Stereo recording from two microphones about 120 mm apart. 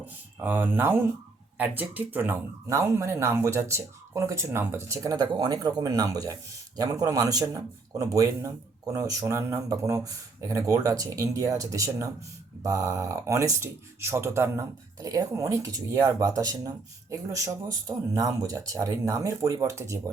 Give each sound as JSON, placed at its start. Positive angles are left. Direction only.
{"t": 0.0, "sound": "speech", "side_deg": -15}
{"t": 5.2, "sound": "speech", "side_deg": -40}